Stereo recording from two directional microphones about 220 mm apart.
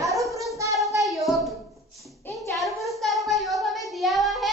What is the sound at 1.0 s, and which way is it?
Hands, centre (ahead or behind).